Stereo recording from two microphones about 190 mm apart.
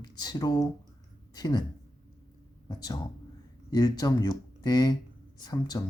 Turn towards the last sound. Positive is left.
turn(degrees=20)  # may be behind; listen again after turning